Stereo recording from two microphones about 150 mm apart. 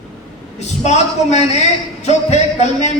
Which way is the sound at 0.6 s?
50° left (ahead or behind).